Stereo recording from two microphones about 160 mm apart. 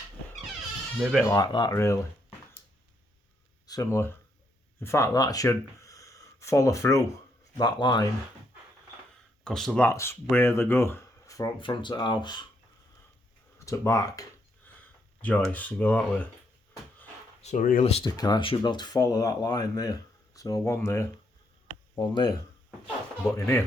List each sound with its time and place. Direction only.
1.2 s speech: 20° left (ahead or behind)
3.7 s speech: 20° left (ahead or behind)
5.5 s a sound: 20° left (ahead or behind)
7.5 s speech: 25° left (ahead or behind)
9.4 s speech: 5° left (ahead or behind)
9.8 s speech: 15° left (ahead or behind)
13.7 s speech: 20° left (ahead or behind)
14.7 s a sound: 10° left (ahead or behind)
15.5 s speech: 10° left (ahead or behind)
17.4 s speech: 50° left (ahead or behind)
17.8 s speech: 40° left (ahead or behind)
18.2 s speech: 30° left (ahead or behind)